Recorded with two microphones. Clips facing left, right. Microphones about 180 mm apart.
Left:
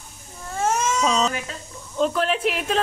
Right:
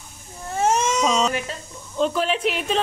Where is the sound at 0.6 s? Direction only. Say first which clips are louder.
Right 2 dB; 20° right (ahead or behind).